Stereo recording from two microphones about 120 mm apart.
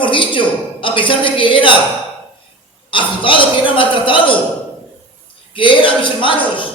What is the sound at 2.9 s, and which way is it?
A man's voice, 45° left (ahead or behind).